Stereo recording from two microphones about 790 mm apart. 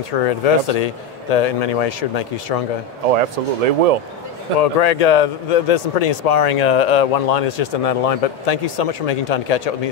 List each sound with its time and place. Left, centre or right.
0.2 s a man's voice: left
3.1 s speech: right
4.6 s a man's voice: left